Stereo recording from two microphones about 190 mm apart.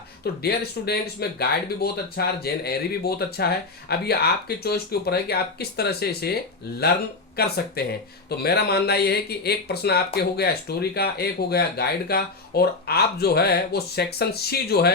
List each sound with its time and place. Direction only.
0.4 s speech: 55° left (ahead or behind)
7.3 s speech: 55° left (ahead or behind)